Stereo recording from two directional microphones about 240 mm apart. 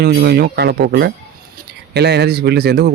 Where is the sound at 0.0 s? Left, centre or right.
Right.